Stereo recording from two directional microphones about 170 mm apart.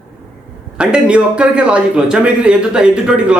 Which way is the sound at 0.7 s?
5° right (ahead or behind).